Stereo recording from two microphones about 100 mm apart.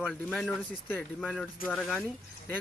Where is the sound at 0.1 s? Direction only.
5° left (ahead or behind).